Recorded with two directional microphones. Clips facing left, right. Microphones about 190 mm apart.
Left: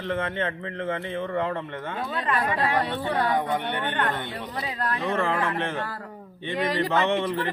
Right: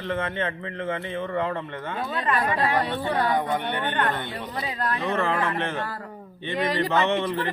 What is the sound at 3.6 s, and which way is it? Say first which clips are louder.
Speech: right 1 dB; 35° right (ahead or behind).